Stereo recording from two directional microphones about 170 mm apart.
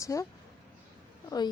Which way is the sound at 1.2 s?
25° left (ahead or behind).